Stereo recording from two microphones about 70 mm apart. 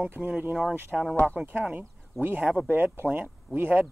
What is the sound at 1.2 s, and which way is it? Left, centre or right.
Speech, right.